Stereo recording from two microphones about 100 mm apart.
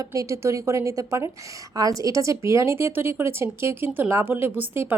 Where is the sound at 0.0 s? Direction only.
35° right (ahead or behind).